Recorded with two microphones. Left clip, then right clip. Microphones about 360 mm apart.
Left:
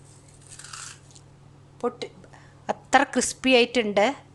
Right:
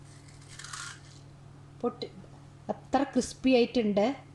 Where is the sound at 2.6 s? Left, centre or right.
Left.